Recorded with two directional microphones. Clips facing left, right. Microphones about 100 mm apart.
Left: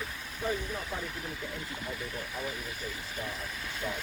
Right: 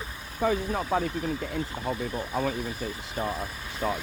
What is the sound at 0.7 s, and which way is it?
Speech, 65° right (ahead or behind).